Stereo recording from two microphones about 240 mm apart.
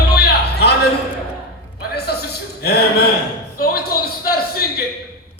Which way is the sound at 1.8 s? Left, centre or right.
Left.